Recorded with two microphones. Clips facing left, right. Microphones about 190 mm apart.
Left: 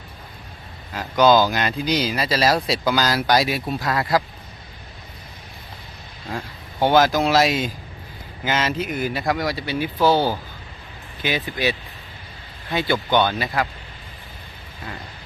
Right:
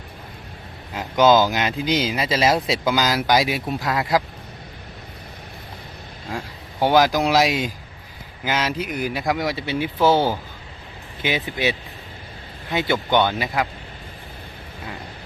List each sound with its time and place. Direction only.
0.9 s speech: 15° right (ahead or behind)
6.3 s speech: 10° right (ahead or behind)